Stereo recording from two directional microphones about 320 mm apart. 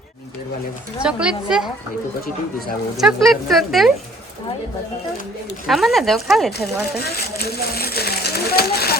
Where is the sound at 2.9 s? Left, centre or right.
Centre.